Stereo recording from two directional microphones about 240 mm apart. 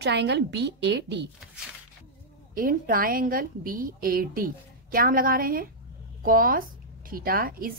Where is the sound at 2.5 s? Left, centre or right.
Right.